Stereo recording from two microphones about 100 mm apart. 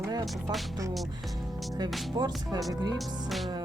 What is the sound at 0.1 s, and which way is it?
Speech, 40° right (ahead or behind).